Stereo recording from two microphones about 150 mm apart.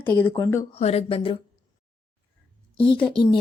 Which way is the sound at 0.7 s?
45° left (ahead or behind).